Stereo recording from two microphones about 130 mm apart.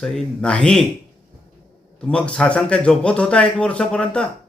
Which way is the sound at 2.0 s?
5° left (ahead or behind).